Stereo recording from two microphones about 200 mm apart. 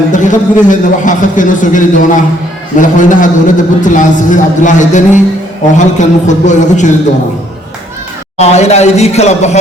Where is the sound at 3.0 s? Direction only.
40° left (ahead or behind).